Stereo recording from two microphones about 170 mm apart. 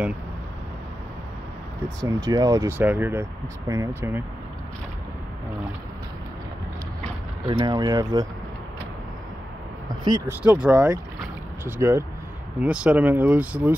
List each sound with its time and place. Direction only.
2.0 s speech: 20° right (ahead or behind)
7.4 s speech: 25° right (ahead or behind)
10.0 s speech: 20° right (ahead or behind)
10.4 s speech: 10° right (ahead or behind)